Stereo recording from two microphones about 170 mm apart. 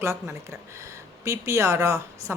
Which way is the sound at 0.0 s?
15° right (ahead or behind).